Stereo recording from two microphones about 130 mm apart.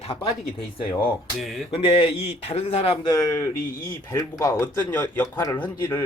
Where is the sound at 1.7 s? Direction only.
45° left (ahead or behind).